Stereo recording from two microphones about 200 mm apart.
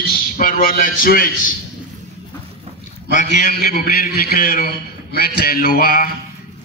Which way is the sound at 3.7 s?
50° left (ahead or behind).